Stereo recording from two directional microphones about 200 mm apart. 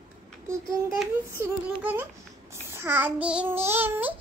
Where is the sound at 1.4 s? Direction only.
10° right (ahead or behind).